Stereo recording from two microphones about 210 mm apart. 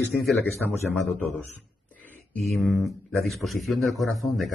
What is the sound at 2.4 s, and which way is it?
Speech, centre (ahead or behind).